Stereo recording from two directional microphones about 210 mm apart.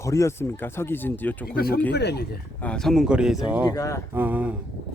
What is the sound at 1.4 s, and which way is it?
Speech, 45° left (ahead or behind).